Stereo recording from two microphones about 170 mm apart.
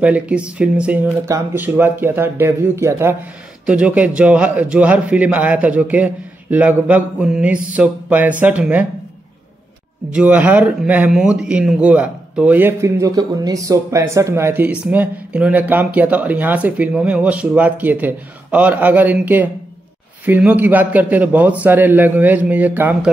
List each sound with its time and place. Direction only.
0.0 s speech: 5° right (ahead or behind)
10.1 s speech: 10° right (ahead or behind)